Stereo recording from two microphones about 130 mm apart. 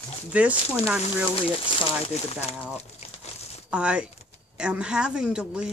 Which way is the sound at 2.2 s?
50° left (ahead or behind).